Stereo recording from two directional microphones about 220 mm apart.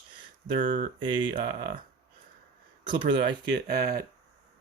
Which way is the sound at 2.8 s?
20° right (ahead or behind).